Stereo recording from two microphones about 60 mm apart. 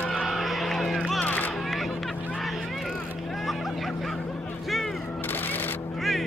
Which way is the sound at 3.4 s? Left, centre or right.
Centre.